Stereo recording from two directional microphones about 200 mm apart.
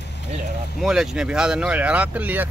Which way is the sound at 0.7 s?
Centre (ahead or behind).